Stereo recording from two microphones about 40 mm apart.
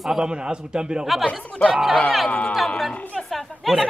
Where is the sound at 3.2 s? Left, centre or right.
Centre.